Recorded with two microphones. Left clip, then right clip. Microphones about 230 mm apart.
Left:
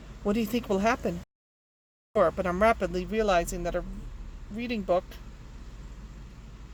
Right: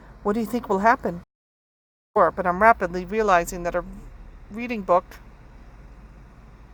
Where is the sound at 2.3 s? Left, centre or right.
Centre.